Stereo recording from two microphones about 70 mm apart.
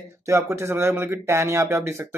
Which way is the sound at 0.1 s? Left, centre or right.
Right.